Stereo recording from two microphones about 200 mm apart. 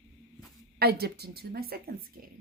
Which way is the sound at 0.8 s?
50° right (ahead or behind).